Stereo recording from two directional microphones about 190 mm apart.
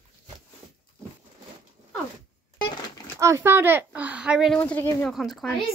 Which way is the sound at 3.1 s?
15° right (ahead or behind).